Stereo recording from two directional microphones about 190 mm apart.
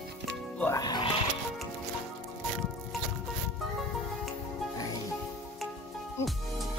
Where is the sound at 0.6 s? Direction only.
15° left (ahead or behind).